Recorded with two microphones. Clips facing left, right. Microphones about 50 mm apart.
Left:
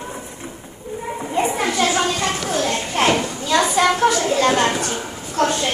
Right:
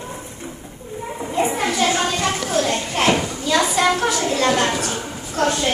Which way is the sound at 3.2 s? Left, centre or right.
Centre.